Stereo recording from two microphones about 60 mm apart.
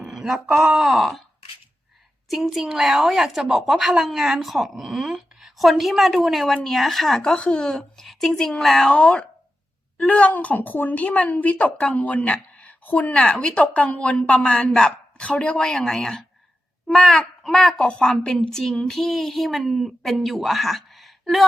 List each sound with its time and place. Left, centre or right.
0.1 s speech: centre
0.8 s a woman's voice: centre
2.3 s a woman's voice: centre
7.3 s a woman's voice: centre